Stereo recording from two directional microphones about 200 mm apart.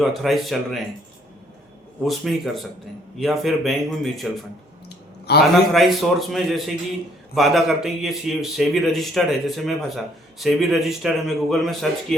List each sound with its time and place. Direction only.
0.0 s a man's voice: centre (ahead or behind)
2.0 s a man's voice: centre (ahead or behind)
5.3 s a man's voice: 55° left (ahead or behind)
5.7 s a man's voice: centre (ahead or behind)